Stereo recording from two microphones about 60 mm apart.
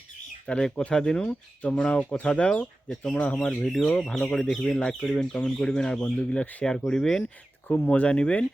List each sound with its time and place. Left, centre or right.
0.4 s speech: centre
6.4 s speech: left
6.7 s speech: centre
7.7 s speech: left